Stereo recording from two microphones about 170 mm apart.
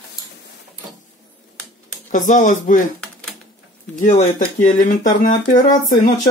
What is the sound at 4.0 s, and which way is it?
Speech, 40° left (ahead or behind).